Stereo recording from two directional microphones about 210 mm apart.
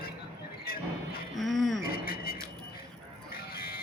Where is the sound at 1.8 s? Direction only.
45° left (ahead or behind).